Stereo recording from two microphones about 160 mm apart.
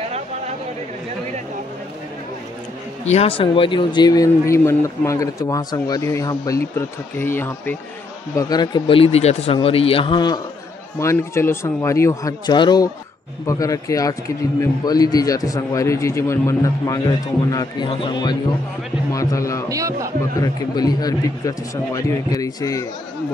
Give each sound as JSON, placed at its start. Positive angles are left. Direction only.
{"t": 3.1, "sound": "a man's voice", "side_deg": 40}
{"t": 8.4, "sound": "a man's voice", "side_deg": 25}
{"t": 19.1, "sound": "a man's voice", "side_deg": 20}
{"t": 19.7, "sound": "speech", "side_deg": -20}
{"t": 20.3, "sound": "a man's voice", "side_deg": 25}